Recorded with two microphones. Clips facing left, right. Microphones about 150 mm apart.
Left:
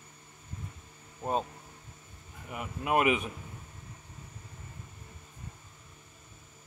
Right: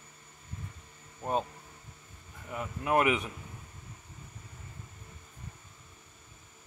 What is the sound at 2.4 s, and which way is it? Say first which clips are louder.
Speech: right 1 dB; 15° left (ahead or behind).